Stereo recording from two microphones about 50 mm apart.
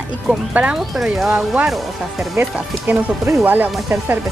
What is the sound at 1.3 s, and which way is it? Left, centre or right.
Speech, centre.